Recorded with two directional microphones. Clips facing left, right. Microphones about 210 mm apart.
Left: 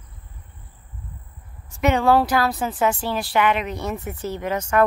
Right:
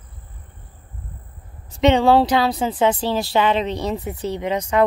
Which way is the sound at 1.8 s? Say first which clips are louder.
Right 3 dB; 25° right (ahead or behind).